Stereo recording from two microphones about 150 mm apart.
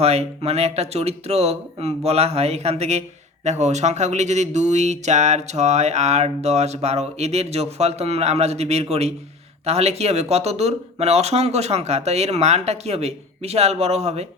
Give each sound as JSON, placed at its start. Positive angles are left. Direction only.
{"t": 0.0, "sound": "speech", "side_deg": -45}